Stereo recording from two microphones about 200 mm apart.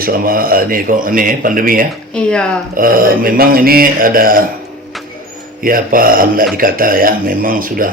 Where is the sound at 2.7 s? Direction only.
45° right (ahead or behind).